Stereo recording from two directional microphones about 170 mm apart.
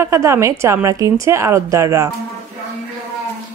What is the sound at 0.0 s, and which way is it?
A woman's voice, 15° right (ahead or behind).